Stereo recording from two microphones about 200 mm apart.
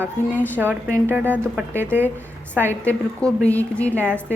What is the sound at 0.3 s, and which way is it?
Speech, 10° left (ahead or behind).